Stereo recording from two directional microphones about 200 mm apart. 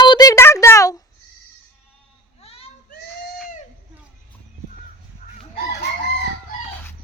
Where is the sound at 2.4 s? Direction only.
30° left (ahead or behind).